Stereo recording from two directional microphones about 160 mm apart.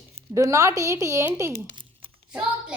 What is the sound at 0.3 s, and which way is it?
Speech, 20° right (ahead or behind).